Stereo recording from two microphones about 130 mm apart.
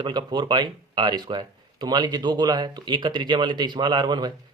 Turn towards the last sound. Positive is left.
turn(degrees=-35)  # may be behind; listen again after turning